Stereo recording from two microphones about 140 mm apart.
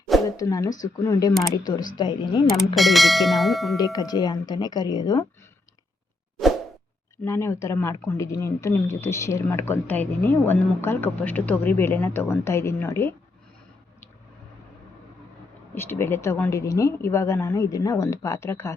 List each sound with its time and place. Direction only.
0.3 s speech: 25° left (ahead or behind)
2.7 s speech: centre (ahead or behind)
3.8 s speech: 25° left (ahead or behind)
7.3 s speech: 20° left (ahead or behind)
15.7 s speech: 15° left (ahead or behind)